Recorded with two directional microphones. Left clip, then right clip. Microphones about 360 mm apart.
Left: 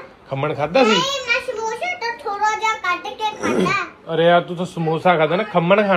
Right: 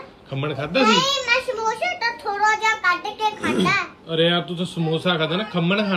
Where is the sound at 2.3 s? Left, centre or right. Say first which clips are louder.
Even; right.